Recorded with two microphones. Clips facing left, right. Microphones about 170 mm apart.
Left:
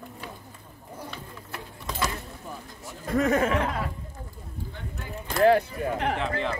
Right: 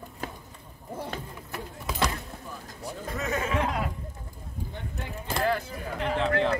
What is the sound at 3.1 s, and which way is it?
Speech, 50° left (ahead or behind).